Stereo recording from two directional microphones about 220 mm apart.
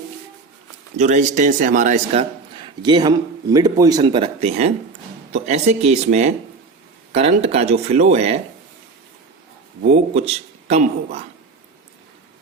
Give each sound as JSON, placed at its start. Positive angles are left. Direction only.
{"t": 0.9, "sound": "a man's voice", "side_deg": -35}
{"t": 2.6, "sound": "a man's voice", "side_deg": -20}
{"t": 9.9, "sound": "a man's voice", "side_deg": -30}